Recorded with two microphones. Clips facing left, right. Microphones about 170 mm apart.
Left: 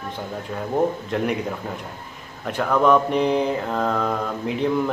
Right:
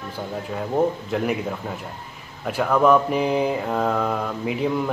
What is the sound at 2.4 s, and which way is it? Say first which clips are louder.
A man's voice: right 1 dB; 5° right (ahead or behind).